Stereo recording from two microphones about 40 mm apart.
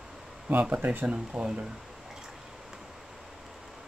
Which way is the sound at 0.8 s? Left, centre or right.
Right.